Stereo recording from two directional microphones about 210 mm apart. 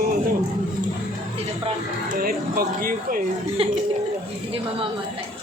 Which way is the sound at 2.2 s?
45° right (ahead or behind).